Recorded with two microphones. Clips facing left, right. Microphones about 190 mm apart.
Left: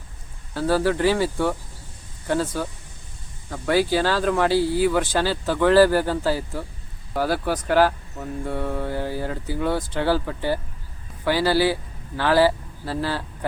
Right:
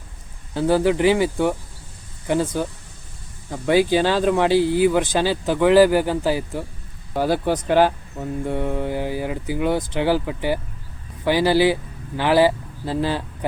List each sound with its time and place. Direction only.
0.5 s speech: 20° right (ahead or behind)